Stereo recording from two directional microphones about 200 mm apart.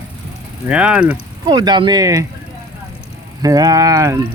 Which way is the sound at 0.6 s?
5° right (ahead or behind).